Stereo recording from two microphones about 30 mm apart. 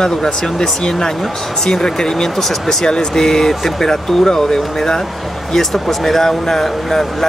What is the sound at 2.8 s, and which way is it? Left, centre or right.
Speech, left.